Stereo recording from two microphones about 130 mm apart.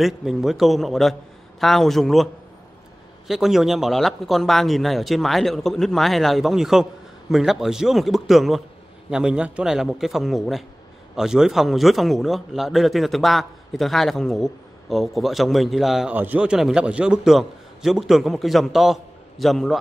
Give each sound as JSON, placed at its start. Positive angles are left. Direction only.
{"t": 0.0, "sound": "speech", "side_deg": -5}
{"t": 3.3, "sound": "speech", "side_deg": -5}